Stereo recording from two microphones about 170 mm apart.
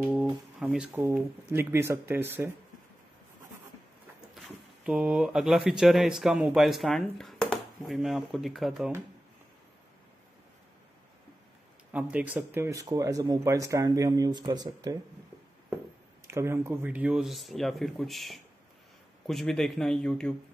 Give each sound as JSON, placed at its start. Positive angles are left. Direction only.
{"t": 0.0, "sound": "speech", "side_deg": -5}
{"t": 4.4, "sound": "speech", "side_deg": -5}
{"t": 11.9, "sound": "speech", "side_deg": -5}
{"t": 16.3, "sound": "speech", "side_deg": -15}